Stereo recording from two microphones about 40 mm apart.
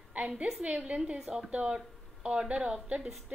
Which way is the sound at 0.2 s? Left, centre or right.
Right.